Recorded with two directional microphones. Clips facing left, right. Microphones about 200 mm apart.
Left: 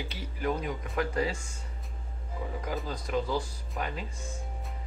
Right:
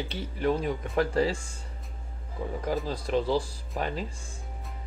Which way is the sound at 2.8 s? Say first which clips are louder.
Right 4 dB; 30° right (ahead or behind).